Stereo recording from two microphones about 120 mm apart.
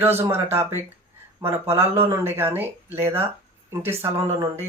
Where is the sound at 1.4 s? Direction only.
20° right (ahead or behind).